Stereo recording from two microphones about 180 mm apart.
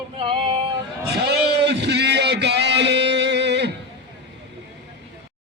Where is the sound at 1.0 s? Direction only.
65° right (ahead or behind).